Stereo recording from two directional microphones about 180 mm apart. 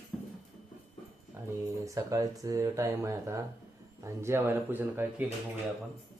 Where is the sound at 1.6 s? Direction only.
20° right (ahead or behind).